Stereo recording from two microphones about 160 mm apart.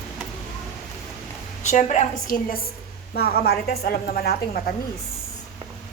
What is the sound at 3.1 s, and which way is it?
A woman's voice, 75° left (ahead or behind).